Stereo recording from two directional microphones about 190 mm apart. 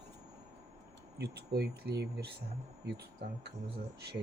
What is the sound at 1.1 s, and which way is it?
Speech, 60° right (ahead or behind).